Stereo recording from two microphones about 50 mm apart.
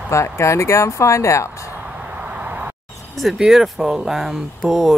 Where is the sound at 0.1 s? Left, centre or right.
Left.